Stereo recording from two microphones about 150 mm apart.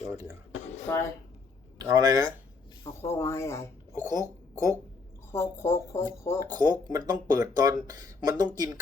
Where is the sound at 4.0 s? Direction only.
25° right (ahead or behind).